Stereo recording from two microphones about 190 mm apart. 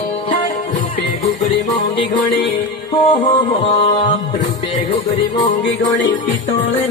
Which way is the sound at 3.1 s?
25° left (ahead or behind).